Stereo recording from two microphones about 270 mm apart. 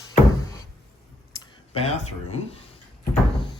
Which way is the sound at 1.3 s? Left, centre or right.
Left.